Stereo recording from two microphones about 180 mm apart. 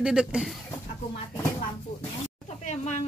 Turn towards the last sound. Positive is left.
turn(degrees=40)  # may be behind; listen again after turning